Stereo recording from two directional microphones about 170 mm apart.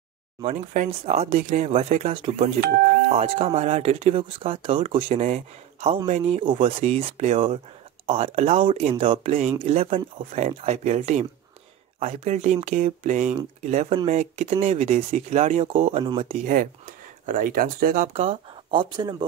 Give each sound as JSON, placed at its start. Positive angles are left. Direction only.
{"t": 0.4, "sound": "speech", "side_deg": -40}
{"t": 16.4, "sound": "speech", "side_deg": -55}